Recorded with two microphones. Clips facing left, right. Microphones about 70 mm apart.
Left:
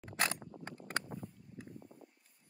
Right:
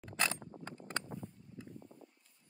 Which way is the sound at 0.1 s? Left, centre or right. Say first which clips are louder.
Even; left.